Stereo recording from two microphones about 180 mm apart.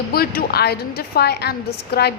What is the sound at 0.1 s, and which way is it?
A woman's voice, 60° left (ahead or behind).